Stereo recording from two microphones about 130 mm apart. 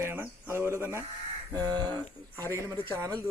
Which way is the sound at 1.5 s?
30° right (ahead or behind).